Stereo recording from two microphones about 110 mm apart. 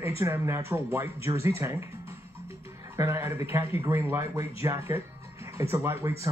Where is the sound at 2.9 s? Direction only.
25° right (ahead or behind).